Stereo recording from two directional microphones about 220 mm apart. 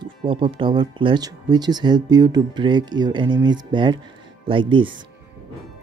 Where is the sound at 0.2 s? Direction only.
25° right (ahead or behind).